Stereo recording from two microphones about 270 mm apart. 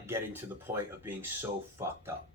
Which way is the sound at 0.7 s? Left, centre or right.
Right.